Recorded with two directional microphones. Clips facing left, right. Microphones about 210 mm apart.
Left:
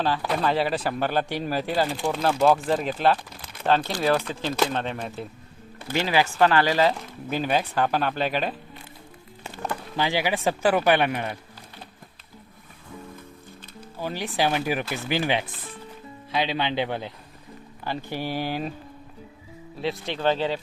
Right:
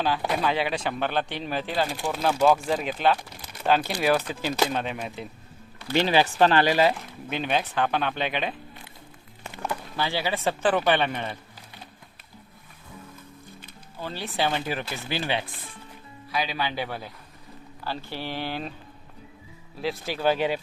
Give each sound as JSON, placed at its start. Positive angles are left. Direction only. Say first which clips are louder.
{"t": 0.4, "sound": "speech", "louder": "left 5 dB", "side_deg": 0}
{"t": 5.9, "sound": "speech", "louder": "right 2 dB", "side_deg": -20}
{"t": 7.3, "sound": "speech", "louder": "left 2 dB", "side_deg": 5}
{"t": 10.0, "sound": "speech", "louder": "left 3 dB", "side_deg": 15}
{"t": 14.0, "sound": "a man's voice", "louder": "left 3 dB", "side_deg": 15}
{"t": 19.8, "sound": "speech", "louder": "even", "side_deg": 0}